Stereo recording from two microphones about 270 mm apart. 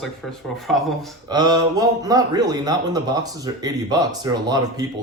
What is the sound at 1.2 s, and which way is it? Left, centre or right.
A man's voice, centre.